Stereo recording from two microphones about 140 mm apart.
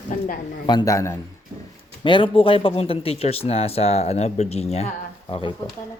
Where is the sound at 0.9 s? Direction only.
20° left (ahead or behind).